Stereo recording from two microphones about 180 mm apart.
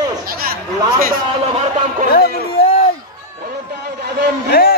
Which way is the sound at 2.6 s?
60° left (ahead or behind).